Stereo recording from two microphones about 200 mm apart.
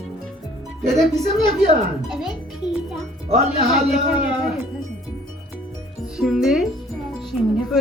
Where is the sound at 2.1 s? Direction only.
Centre (ahead or behind).